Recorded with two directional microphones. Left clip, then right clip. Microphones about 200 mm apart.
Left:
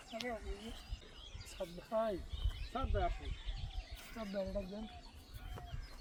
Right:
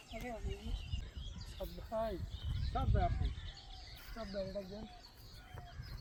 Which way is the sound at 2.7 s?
25° left (ahead or behind).